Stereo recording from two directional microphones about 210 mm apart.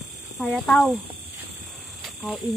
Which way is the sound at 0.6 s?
5° left (ahead or behind).